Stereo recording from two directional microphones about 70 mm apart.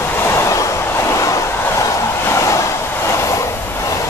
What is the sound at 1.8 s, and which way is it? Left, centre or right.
Vehicle, left.